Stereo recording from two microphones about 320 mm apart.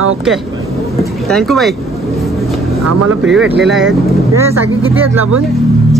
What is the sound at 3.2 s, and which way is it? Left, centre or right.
Speech, centre.